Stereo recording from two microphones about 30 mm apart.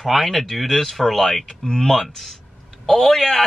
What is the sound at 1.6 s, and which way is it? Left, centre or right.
Speech, left.